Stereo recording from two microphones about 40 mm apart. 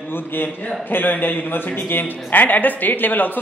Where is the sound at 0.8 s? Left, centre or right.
Left.